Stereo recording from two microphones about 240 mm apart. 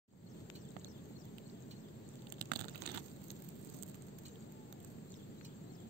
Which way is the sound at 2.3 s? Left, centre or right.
Right.